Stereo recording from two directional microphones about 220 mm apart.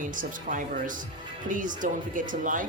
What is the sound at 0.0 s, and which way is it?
Speech, 35° right (ahead or behind).